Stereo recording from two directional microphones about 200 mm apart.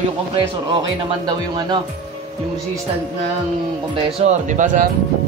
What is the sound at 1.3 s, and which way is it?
Speech, 20° right (ahead or behind).